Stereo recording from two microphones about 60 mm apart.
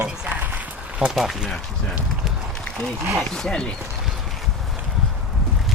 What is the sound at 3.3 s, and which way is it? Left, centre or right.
Speech, centre.